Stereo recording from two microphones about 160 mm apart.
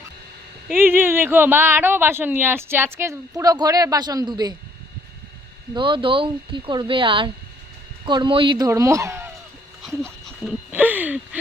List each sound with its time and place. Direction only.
0.8 s speech: 15° right (ahead or behind)
5.7 s speech: 30° right (ahead or behind); by 9.3 s 15° right (ahead or behind)
10.4 s a sound: 10° right (ahead or behind)